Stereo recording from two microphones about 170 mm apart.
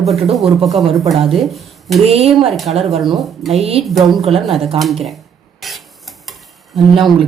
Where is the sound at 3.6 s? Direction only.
35° right (ahead or behind).